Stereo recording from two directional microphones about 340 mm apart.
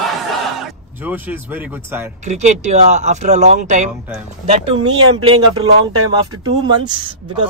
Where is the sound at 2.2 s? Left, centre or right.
Right.